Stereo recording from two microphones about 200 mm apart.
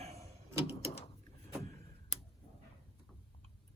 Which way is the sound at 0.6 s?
30° left (ahead or behind).